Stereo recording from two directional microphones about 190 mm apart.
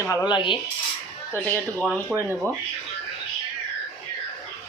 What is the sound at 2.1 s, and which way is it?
Speech, 5° right (ahead or behind).